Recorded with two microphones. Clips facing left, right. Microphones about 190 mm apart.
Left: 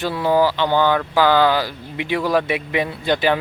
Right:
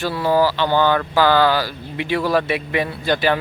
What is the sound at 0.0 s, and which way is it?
Speech, 20° left (ahead or behind).